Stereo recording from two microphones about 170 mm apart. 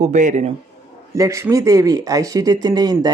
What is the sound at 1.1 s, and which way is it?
Speech, 15° right (ahead or behind).